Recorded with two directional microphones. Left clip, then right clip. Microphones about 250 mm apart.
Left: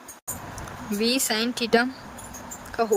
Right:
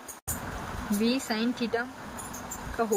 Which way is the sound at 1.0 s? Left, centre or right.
Left.